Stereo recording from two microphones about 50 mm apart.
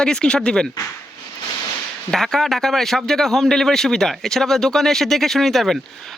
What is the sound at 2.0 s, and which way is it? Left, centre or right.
Speech, centre.